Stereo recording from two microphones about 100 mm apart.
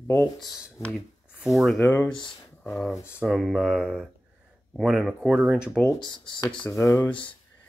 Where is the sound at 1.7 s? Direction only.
25° left (ahead or behind).